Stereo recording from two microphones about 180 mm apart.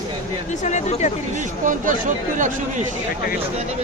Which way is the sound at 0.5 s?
40° left (ahead or behind).